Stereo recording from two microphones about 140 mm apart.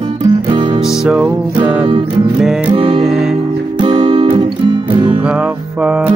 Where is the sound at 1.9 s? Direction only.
40° right (ahead or behind).